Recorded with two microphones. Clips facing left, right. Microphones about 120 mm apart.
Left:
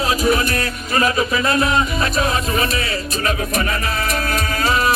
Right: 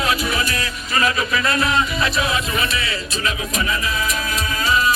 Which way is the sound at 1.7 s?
40° left (ahead or behind).